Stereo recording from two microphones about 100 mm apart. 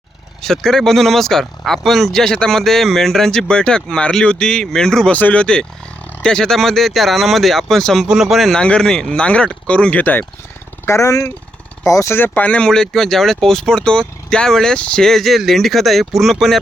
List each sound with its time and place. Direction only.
0.4 s speech: 5° left (ahead or behind)
10.8 s speech: 30° left (ahead or behind)
12.1 s speech: 20° left (ahead or behind); by 16.6 s centre (ahead or behind)